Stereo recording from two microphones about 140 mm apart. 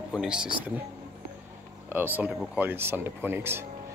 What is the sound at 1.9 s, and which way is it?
Speech, 15° right (ahead or behind).